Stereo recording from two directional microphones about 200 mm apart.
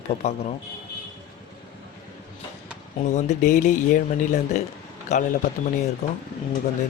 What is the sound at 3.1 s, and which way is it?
Speech, 35° left (ahead or behind).